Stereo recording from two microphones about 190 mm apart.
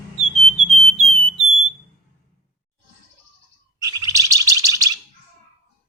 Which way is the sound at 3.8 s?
20° right (ahead or behind).